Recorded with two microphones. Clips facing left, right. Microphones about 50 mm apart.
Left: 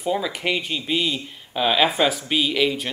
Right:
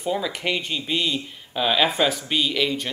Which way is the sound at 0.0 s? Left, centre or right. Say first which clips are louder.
Left 1 dB; centre.